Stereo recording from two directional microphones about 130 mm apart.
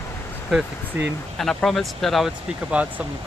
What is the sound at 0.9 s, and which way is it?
Speech, 15° right (ahead or behind).